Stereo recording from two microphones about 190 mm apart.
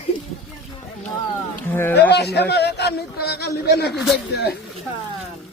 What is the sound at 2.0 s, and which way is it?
A man's voice, 60° left (ahead or behind).